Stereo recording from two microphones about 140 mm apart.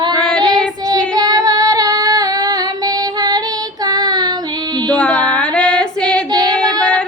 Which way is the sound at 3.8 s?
30° right (ahead or behind).